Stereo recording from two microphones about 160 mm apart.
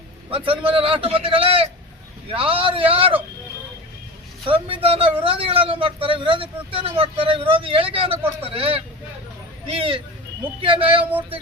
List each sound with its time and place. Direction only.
0.3 s speech: 35° right (ahead or behind)
4.4 s speech: 35° right (ahead or behind)